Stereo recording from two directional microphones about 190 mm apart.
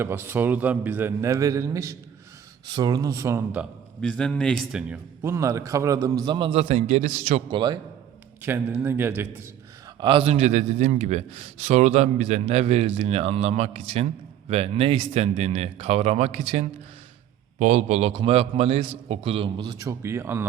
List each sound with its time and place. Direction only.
0.0 s a man's voice: 10° right (ahead or behind)
4.0 s a man's voice: 5° left (ahead or behind); by 7.6 s 35° right (ahead or behind)
8.4 s a man's voice: 10° right (ahead or behind)
10.0 s a man's voice: 30° right (ahead or behind); by 20.5 s 10° right (ahead or behind)